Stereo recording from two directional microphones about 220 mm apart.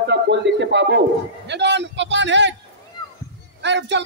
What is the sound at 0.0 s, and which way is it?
A man's voice, 50° right (ahead or behind).